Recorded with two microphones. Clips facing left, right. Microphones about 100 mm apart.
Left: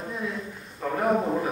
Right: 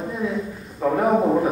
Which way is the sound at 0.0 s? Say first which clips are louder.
Right 7 dB; centre (ahead or behind).